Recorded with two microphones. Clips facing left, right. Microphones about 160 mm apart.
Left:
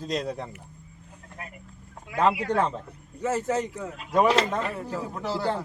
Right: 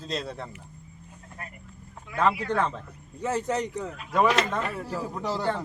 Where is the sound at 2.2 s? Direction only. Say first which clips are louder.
Left 2 dB; 10° left (ahead or behind).